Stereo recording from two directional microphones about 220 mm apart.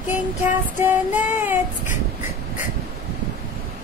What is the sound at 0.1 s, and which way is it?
Child singing, 10° right (ahead or behind).